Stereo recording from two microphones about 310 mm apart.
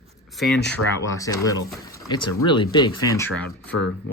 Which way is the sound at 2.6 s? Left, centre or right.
Centre.